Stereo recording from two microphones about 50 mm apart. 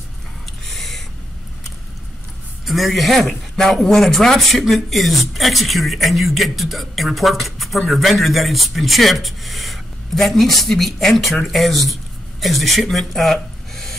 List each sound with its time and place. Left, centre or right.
0.7 s owl: centre
2.6 s speech: centre